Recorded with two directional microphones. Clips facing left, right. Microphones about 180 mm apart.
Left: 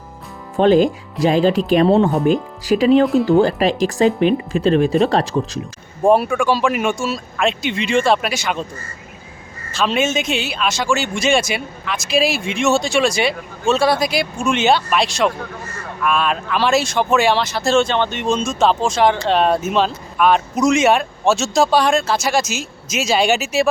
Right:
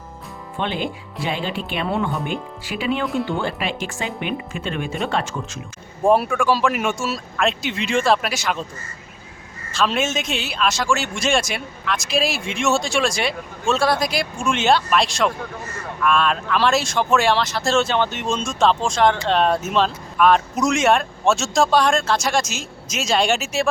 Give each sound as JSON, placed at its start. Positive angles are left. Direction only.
{"t": 0.5, "sound": "speech", "side_deg": 40}
{"t": 6.1, "sound": "speech", "side_deg": 0}
{"t": 9.7, "sound": "speech", "side_deg": 0}